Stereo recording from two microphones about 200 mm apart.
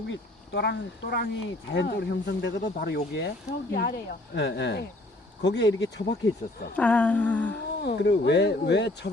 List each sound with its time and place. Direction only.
0.1 s speech: 60° left (ahead or behind)
6.7 s humming: 5° left (ahead or behind)
7.8 s speech: 55° left (ahead or behind)